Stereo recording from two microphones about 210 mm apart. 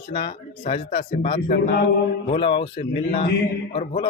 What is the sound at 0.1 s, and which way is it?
Speech, 25° left (ahead or behind).